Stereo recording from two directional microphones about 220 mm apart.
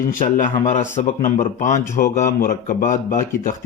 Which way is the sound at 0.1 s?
35° left (ahead or behind).